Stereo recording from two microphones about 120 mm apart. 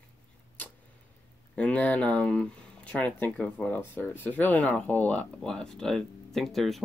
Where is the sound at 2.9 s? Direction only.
10° left (ahead or behind).